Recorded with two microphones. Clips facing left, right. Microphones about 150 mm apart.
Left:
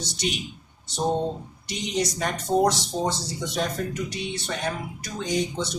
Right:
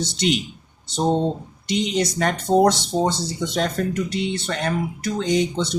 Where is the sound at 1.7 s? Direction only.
70° right (ahead or behind).